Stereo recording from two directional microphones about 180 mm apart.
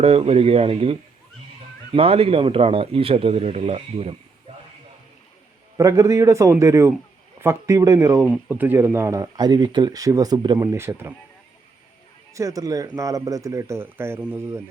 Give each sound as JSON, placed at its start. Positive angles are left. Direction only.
{"t": 0.0, "sound": "speech", "side_deg": -35}
{"t": 5.7, "sound": "speech", "side_deg": -15}
{"t": 12.3, "sound": "speech", "side_deg": -15}